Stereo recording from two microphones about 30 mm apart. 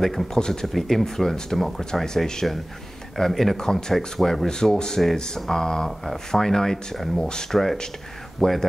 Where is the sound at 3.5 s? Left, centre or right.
Centre.